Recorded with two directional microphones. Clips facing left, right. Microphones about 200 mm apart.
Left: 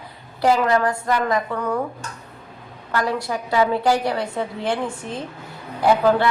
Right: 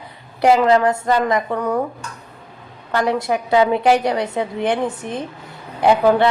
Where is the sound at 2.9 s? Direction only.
20° right (ahead or behind).